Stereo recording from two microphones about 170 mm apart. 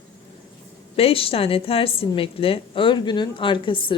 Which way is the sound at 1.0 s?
35° left (ahead or behind).